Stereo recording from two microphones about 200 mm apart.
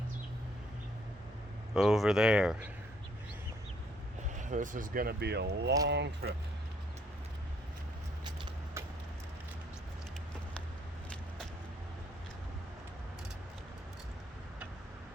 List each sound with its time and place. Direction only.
1.7 s speech: centre (ahead or behind)
4.4 s speech: 40° right (ahead or behind); by 6.3 s 60° right (ahead or behind)